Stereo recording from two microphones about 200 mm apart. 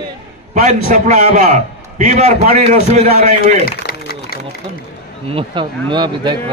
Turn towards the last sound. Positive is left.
turn(degrees=-20)  # may be behind; listen again after turning